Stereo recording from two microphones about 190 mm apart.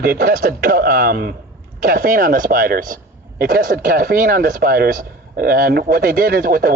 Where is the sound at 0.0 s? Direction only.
50° right (ahead or behind).